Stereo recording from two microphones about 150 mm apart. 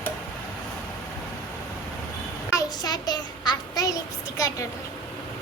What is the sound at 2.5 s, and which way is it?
Child singing, 25° left (ahead or behind).